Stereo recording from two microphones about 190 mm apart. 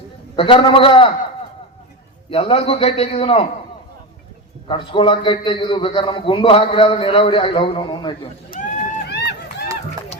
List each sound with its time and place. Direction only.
0.3 s a man's voice: 30° left (ahead or behind)
2.3 s a man's voice: 30° left (ahead or behind)
4.7 s a man's voice: 25° left (ahead or behind)
9.0 s run: 60° left (ahead or behind)